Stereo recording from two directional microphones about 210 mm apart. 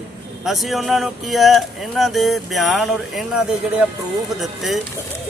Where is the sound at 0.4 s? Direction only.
Centre (ahead or behind).